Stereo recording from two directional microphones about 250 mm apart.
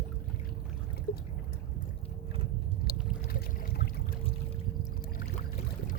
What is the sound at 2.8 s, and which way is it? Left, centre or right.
Pour, left.